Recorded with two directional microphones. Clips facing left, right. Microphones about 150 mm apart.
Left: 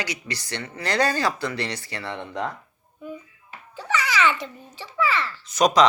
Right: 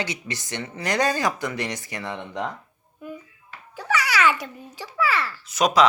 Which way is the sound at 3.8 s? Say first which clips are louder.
Right 1 dB; 10° right (ahead or behind).